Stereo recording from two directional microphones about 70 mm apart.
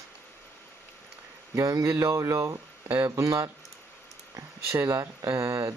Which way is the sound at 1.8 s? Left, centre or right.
Right.